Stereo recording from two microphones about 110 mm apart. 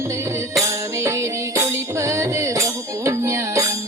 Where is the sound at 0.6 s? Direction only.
25° right (ahead or behind).